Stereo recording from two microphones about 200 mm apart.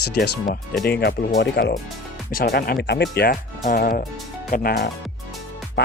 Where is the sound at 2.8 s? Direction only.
60° left (ahead or behind).